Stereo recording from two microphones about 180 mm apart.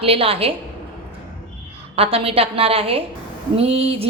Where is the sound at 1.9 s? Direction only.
30° right (ahead or behind).